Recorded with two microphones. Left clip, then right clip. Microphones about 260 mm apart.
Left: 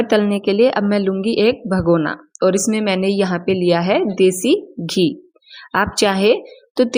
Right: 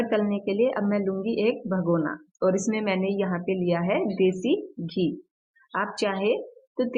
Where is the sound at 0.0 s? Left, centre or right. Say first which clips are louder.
Left 9 dB; left.